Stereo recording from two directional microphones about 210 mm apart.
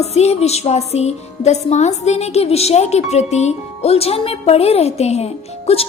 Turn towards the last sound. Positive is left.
turn(degrees=30)  # may be behind; listen again after turning